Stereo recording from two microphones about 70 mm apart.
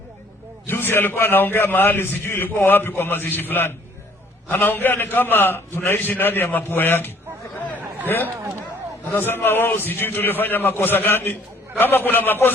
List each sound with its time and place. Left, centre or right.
0.7 s a man's voice: left